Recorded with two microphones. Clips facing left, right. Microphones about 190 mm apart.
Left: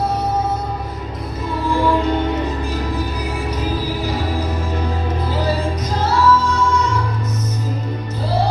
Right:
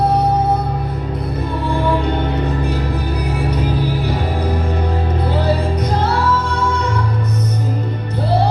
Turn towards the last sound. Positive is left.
turn(degrees=-60)  # may be behind; listen again after turning